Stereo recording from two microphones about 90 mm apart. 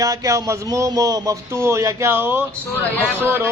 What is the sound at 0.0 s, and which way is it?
A man's voice, 40° right (ahead or behind).